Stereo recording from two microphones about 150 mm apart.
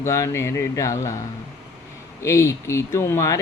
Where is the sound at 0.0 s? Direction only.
20° left (ahead or behind).